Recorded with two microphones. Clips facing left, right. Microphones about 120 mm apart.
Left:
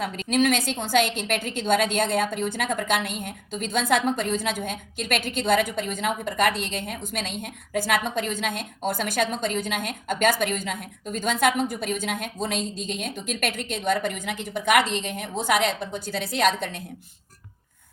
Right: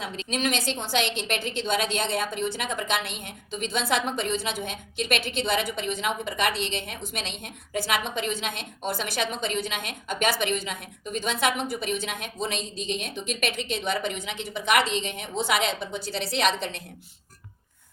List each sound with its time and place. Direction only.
0.0 s a woman's voice: 55° left (ahead or behind)